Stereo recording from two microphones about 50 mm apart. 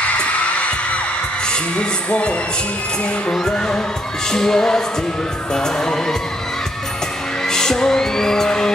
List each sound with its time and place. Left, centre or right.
0.0 s music: left
3.5 s music: centre
7.4 s music: centre